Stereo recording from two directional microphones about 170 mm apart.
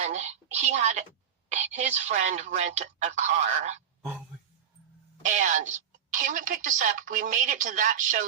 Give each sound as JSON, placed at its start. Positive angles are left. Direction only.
{"t": 0.0, "sound": "a woman's voice", "side_deg": -40}
{"t": 5.2, "sound": "a woman's voice", "side_deg": -45}